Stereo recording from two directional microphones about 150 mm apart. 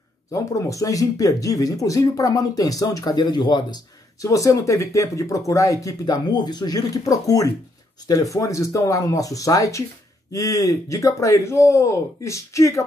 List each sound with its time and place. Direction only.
0.3 s speech: 20° left (ahead or behind)